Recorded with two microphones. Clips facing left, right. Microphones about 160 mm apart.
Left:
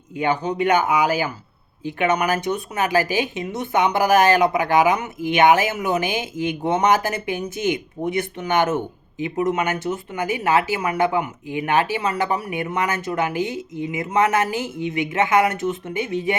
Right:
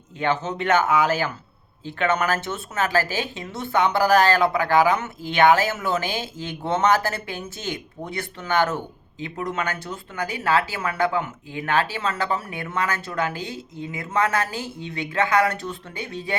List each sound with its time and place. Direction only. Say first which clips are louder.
0.2 s speech: left 3 dB; 15° left (ahead or behind)